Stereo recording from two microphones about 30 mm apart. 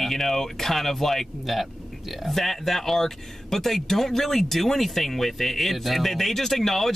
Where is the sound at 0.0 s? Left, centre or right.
Centre.